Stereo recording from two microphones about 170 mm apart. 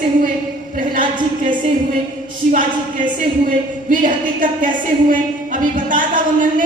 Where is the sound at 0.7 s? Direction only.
50° right (ahead or behind).